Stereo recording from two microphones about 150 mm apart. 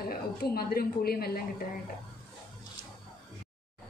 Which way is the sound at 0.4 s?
90° left.